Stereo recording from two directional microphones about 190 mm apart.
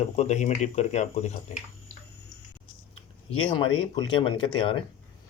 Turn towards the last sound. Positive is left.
turn(degrees=25)  # may be behind; listen again after turning